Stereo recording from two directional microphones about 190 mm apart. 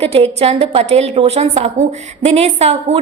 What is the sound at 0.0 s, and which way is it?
A woman's voice, 30° right (ahead or behind).